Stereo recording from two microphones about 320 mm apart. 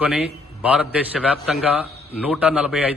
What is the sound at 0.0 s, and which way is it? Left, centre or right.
A man's voice, centre.